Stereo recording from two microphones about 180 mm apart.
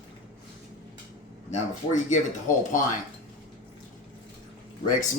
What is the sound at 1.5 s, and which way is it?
Speech, 40° left (ahead or behind).